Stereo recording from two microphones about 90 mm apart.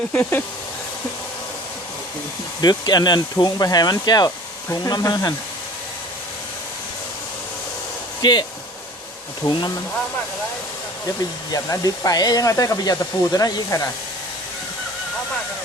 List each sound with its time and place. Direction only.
0.1 s speech: 20° left (ahead or behind)
2.6 s speech: 50° left (ahead or behind)
8.2 s speech: 50° left (ahead or behind)
9.5 s speech: 55° left (ahead or behind)
11.5 s speech: 40° left (ahead or behind)